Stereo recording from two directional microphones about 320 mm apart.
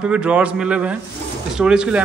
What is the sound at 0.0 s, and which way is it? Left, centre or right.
A man's voice, centre.